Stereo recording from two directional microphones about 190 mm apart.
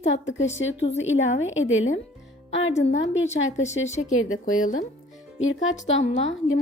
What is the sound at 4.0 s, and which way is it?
Speech, 90° left.